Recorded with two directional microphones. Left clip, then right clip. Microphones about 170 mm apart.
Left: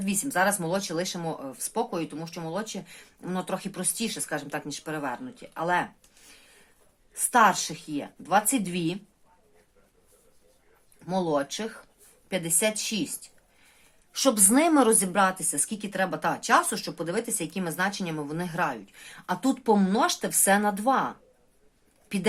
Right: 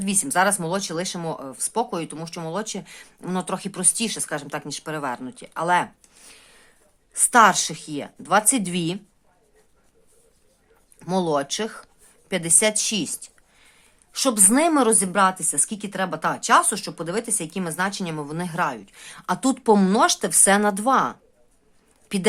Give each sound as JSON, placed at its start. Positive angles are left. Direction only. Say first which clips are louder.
{"t": 0.0, "sound": "speech", "louder": "right 5 dB", "side_deg": -35}
{"t": 11.0, "sound": "speech", "louder": "right 4 dB", "side_deg": -40}
{"t": 14.1, "sound": "a woman's voice", "louder": "right 2 dB", "side_deg": -25}